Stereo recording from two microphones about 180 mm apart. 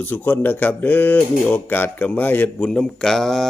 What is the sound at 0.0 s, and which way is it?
A man's voice, 10° left (ahead or behind).